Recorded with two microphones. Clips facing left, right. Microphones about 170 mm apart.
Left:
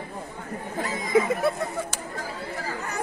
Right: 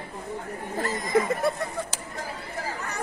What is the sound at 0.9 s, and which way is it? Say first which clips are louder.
Speech: left 2 dB; 5° left (ahead or behind).